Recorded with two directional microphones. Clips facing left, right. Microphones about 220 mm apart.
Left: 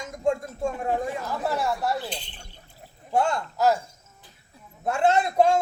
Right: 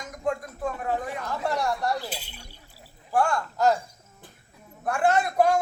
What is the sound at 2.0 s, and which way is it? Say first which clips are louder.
Speech: left 1 dB; 5° right (ahead or behind).